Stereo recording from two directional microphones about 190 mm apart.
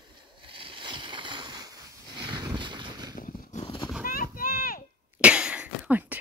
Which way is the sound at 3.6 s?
25° left (ahead or behind).